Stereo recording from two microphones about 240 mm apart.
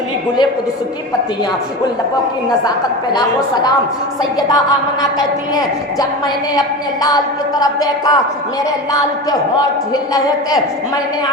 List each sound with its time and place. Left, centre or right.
3.1 s a woman's voice: centre
6.6 s a woman's voice: centre
9.9 s a woman's voice: centre